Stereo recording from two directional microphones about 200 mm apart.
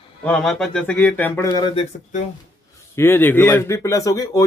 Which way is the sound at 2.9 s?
10° left (ahead or behind).